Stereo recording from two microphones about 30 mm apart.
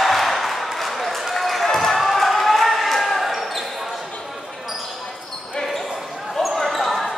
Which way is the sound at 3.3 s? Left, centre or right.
Centre.